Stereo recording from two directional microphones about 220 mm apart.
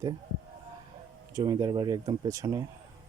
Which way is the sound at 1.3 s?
15° right (ahead or behind).